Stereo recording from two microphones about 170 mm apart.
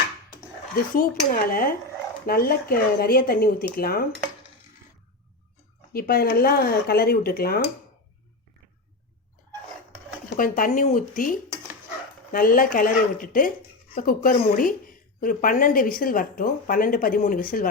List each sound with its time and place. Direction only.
0.9 s a woman's voice: 55° left (ahead or behind)
5.9 s a woman's voice: 65° left (ahead or behind)
10.2 s a woman's voice: 55° left (ahead or behind)